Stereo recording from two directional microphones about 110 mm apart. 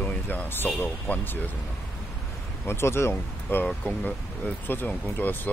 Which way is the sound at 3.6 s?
5° left (ahead or behind).